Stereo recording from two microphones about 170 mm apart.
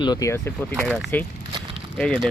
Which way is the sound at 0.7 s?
5° left (ahead or behind).